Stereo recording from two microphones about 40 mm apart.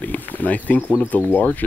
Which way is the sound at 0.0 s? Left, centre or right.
Left.